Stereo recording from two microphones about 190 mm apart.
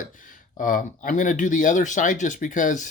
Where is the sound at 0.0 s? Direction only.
45° left (ahead or behind).